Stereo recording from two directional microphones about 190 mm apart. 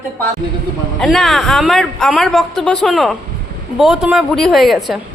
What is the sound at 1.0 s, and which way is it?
A man's voice, centre (ahead or behind).